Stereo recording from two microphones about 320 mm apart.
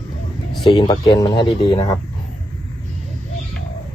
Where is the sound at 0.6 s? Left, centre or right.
Centre.